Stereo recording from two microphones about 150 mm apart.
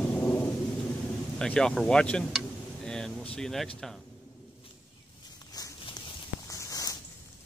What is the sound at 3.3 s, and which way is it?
Speech, 5° left (ahead or behind).